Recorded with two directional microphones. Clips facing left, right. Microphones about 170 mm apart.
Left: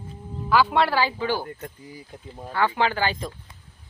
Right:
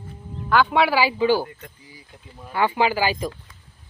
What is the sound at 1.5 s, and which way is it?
Speech, 45° left (ahead or behind).